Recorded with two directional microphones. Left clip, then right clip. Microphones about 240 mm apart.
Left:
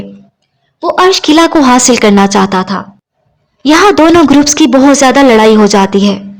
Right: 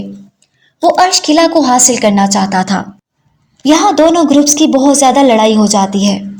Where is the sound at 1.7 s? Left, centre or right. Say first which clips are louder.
Left 3 dB; left.